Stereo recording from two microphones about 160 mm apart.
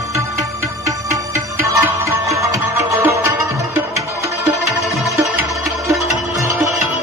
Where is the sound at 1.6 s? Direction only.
20° right (ahead or behind).